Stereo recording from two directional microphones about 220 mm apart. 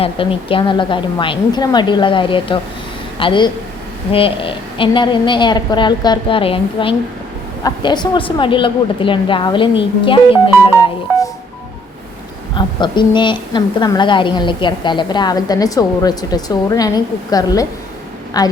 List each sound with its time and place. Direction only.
0.0 s a woman's voice: 25° left (ahead or behind)
12.5 s a woman's voice: 20° left (ahead or behind)